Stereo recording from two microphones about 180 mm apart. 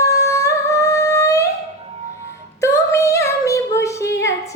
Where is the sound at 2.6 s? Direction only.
15° left (ahead or behind).